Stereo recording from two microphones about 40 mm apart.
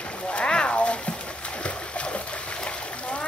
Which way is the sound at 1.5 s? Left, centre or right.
Left.